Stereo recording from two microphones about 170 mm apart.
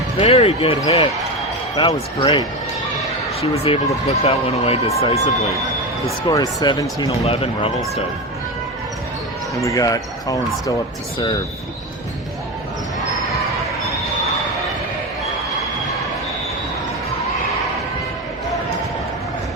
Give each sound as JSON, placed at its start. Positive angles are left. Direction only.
{"t": 0.2, "sound": "speech", "side_deg": 35}
{"t": 1.8, "sound": "speech", "side_deg": 35}
{"t": 6.2, "sound": "speech", "side_deg": 25}
{"t": 9.6, "sound": "speech", "side_deg": 20}